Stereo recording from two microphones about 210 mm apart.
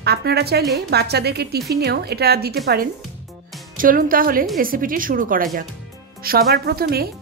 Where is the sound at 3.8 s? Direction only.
40° right (ahead or behind).